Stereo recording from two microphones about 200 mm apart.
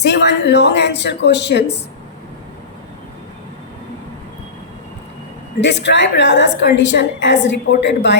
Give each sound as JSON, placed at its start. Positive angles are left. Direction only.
{"t": 0.0, "sound": "a woman's voice", "side_deg": 60}
{"t": 5.5, "sound": "a woman's voice", "side_deg": 60}